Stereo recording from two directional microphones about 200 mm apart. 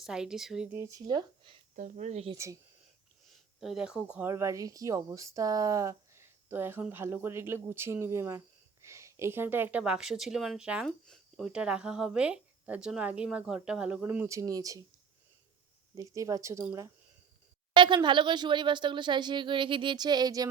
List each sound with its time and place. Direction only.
0.0 s speech: 5° right (ahead or behind); by 1.5 s 20° right (ahead or behind)
1.7 s speech: 40° right (ahead or behind)
2.3 s speech: 15° right (ahead or behind)
3.2 s speech: centre (ahead or behind); by 14.8 s 15° right (ahead or behind)
16.0 s speech: 15° right (ahead or behind)